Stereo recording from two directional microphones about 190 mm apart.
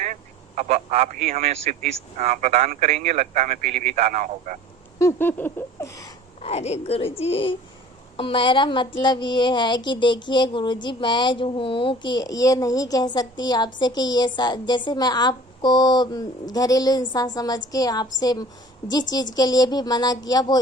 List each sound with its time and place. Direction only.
0.0 s a man's voice: 40° right (ahead or behind)
4.9 s a sound: 15° left (ahead or behind)
6.4 s speech: 35° left (ahead or behind)